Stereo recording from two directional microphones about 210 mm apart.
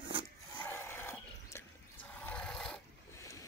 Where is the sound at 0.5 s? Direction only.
10° left (ahead or behind).